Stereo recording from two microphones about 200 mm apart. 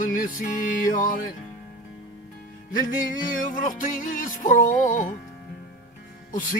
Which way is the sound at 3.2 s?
40° left (ahead or behind).